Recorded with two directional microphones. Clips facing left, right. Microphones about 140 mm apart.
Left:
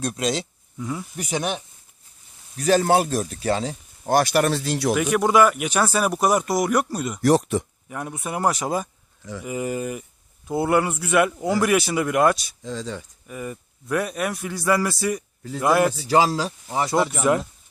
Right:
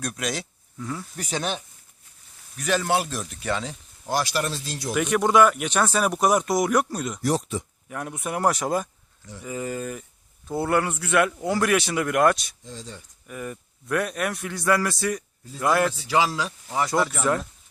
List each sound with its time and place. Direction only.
0.0 s speech: 25° left (ahead or behind)
0.9 s a man's voice: 15° left (ahead or behind)
2.6 s a man's voice: 35° left (ahead or behind)
4.0 s speech: 55° left (ahead or behind); by 4.9 s 70° left (ahead or behind)
4.9 s speech: 5° left (ahead or behind)
7.2 s speech: 70° left (ahead or behind)
7.9 s a man's voice: 5° left (ahead or behind)
12.6 s speech: 90° left
13.2 s a man's voice: 5° left (ahead or behind)
15.9 s a man's voice: 40° left (ahead or behind)
17.0 s a man's voice: 15° left (ahead or behind)